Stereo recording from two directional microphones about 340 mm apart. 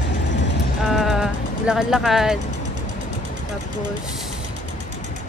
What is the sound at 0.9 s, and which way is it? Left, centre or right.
Speech, centre.